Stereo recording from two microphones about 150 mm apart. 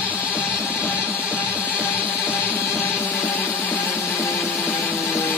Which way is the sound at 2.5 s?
15° left (ahead or behind).